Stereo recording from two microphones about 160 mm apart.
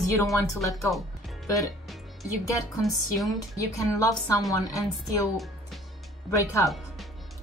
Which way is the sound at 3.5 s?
20° left (ahead or behind).